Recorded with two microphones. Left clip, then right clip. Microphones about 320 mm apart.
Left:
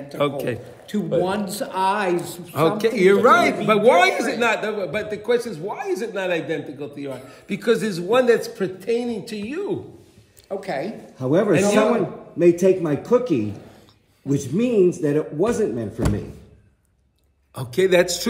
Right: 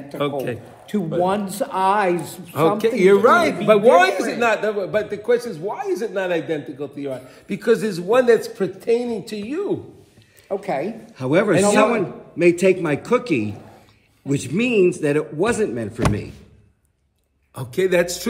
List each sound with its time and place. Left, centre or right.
0.2 s a man's voice: centre
0.8 s a man's voice: right
2.8 s a man's voice: centre
10.5 s a man's voice: right
11.1 s a man's voice: centre
17.6 s a man's voice: centre